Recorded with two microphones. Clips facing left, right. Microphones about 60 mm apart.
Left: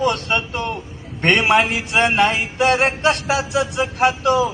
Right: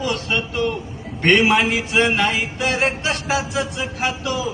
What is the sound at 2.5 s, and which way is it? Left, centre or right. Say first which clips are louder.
Speech: left 4 dB; left.